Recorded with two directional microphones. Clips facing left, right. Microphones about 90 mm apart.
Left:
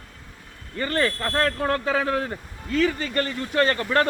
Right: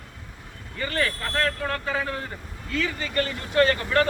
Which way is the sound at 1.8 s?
70° left (ahead or behind).